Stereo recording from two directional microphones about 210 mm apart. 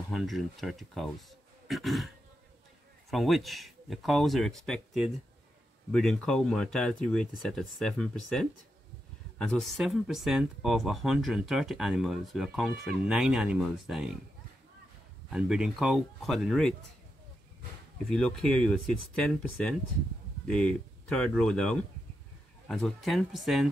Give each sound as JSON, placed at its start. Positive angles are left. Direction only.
{"t": 0.1, "sound": "speech", "side_deg": 0}
{"t": 15.2, "sound": "speech", "side_deg": -5}
{"t": 18.1, "sound": "speech", "side_deg": 5}